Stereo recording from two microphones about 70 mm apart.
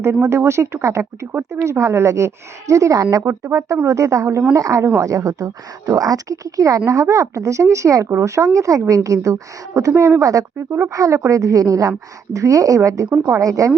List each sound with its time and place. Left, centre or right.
0.0 s speech: right
13.4 s speech: right